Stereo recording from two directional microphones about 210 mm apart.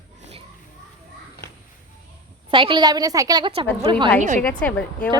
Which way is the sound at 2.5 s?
25° right (ahead or behind).